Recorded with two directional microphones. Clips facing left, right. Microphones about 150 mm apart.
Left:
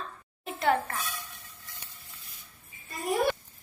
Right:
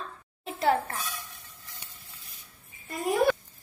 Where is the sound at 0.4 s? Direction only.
30° right (ahead or behind).